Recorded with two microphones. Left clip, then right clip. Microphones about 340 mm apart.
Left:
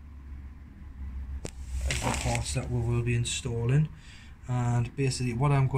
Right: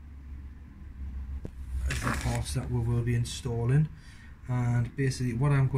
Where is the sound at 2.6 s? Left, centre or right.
Centre.